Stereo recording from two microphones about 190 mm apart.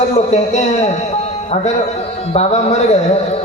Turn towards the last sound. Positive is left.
turn(degrees=35)  # may be behind; listen again after turning